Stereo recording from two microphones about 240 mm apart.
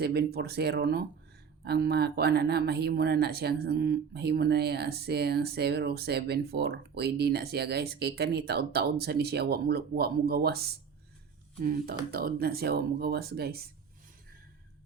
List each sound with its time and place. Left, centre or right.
0.0 s speech: right